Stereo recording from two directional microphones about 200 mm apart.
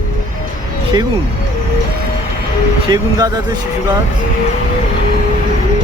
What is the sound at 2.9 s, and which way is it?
Speech, 20° right (ahead or behind).